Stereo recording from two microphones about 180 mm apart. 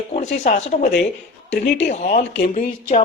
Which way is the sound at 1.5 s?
90° left.